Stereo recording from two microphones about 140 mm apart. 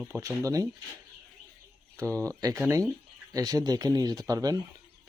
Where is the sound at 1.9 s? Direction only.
20° right (ahead or behind).